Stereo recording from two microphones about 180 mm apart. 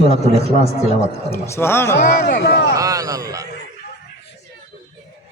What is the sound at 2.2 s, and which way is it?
Speech, 60° left (ahead or behind).